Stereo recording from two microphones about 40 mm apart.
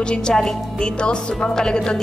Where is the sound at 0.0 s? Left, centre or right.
Left.